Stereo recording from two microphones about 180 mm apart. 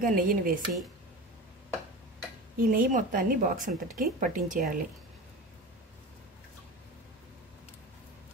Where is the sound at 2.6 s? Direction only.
50° right (ahead or behind).